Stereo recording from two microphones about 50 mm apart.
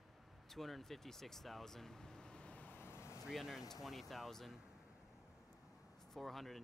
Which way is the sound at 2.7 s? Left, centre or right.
Left.